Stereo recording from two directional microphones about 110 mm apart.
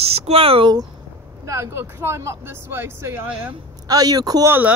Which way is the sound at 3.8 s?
35° right (ahead or behind).